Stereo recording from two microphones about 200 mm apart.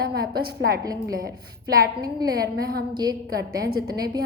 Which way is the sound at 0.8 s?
20° right (ahead or behind).